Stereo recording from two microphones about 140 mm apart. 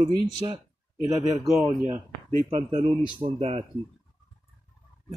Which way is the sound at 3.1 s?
40° right (ahead or behind).